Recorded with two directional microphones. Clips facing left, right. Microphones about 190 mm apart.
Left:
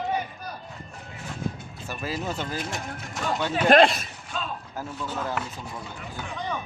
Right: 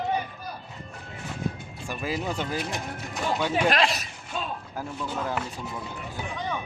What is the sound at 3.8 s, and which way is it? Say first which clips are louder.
Speech: left 6 dB; 50° left (ahead or behind).